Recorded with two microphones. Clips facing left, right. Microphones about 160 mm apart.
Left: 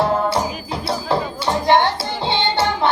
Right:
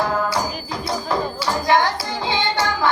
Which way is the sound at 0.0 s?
30° left (ahead or behind).